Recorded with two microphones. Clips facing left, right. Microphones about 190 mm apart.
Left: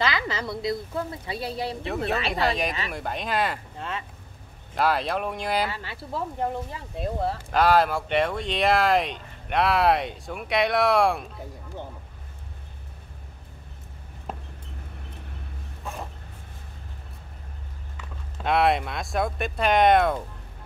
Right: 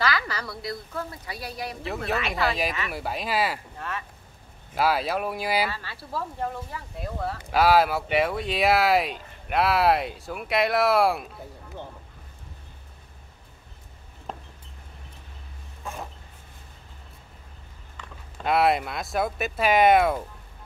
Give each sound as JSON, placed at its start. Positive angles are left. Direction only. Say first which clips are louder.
{"t": 0.0, "sound": "a woman's voice", "louder": "left 1 dB", "side_deg": 20}
{"t": 2.4, "sound": "speech", "louder": "left 1 dB", "side_deg": 0}
{"t": 3.7, "sound": "speech", "louder": "left 1 dB", "side_deg": 20}
{"t": 4.7, "sound": "speech", "louder": "even", "side_deg": -5}
{"t": 5.7, "sound": "a woman's voice", "louder": "left 2 dB", "side_deg": 20}
{"t": 7.5, "sound": "speech", "louder": "right 1 dB", "side_deg": -5}
{"t": 14.3, "sound": "a sound", "louder": "left 1 dB", "side_deg": 5}
{"t": 15.8, "sound": "a sound", "louder": "even", "side_deg": 0}
{"t": 18.4, "sound": "speech", "louder": "even", "side_deg": 0}